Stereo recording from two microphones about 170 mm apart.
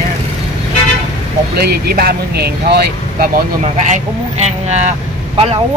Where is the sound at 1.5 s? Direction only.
65° right (ahead or behind).